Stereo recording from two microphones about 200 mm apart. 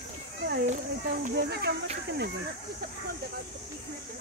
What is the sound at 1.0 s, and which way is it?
Speech, 55° right (ahead or behind).